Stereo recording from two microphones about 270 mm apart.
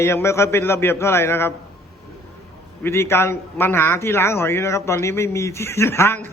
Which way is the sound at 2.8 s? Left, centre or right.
Centre.